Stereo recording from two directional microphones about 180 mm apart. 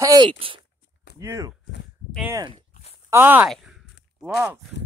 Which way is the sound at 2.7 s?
35° left (ahead or behind).